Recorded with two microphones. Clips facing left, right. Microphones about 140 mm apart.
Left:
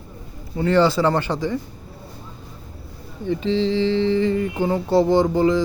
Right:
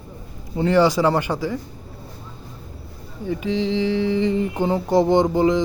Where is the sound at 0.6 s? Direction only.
15° right (ahead or behind).